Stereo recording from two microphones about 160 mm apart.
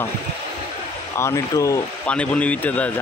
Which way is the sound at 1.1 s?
20° left (ahead or behind).